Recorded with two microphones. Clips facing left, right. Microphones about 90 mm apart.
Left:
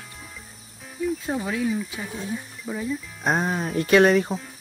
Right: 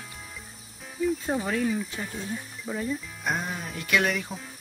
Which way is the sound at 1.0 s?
Centre (ahead or behind).